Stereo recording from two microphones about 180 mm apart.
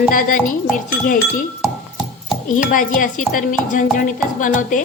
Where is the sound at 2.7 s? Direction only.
50° left (ahead or behind).